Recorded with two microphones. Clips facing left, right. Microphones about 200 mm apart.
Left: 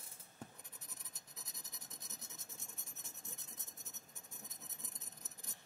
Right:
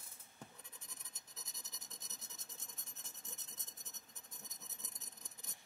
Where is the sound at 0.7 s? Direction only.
10° left (ahead or behind).